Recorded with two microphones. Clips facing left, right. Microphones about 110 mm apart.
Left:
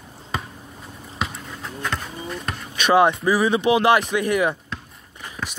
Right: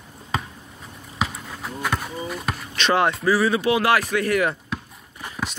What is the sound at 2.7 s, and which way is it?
Speech, 15° left (ahead or behind).